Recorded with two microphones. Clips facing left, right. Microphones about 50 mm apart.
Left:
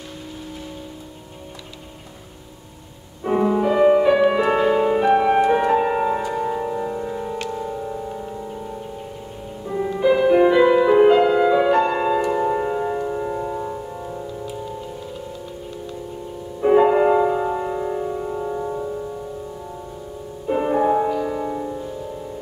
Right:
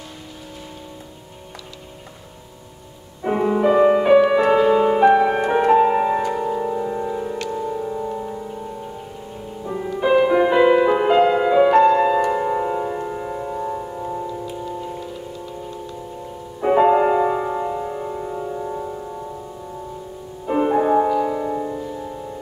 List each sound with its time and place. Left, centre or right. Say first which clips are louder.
3.3 s music: right 1 dB; centre
6.3 s music: right 1 dB; centre
9.9 s music: even; right; by 11.9 s centre
11.9 s music: right 4 dB; centre
12.3 s music: even; centre
16.6 s music: even; centre
17.6 s music: left 1 dB; centre
20.4 s music: right 1 dB; centre